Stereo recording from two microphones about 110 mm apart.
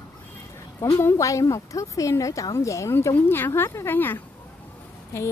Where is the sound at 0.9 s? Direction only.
25° left (ahead or behind).